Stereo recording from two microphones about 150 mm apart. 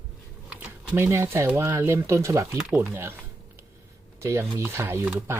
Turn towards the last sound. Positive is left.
turn(degrees=-15)  # may be behind; listen again after turning